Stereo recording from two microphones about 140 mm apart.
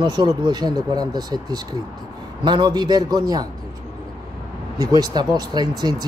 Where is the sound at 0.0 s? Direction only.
30° right (ahead or behind).